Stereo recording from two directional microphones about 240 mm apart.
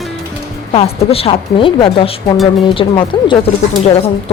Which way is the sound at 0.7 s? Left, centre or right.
Left.